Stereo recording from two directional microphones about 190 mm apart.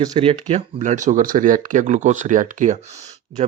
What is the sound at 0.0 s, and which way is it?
Speech, 25° right (ahead or behind).